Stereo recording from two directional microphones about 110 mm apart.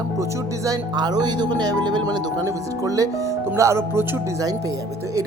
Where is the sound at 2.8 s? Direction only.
30° right (ahead or behind).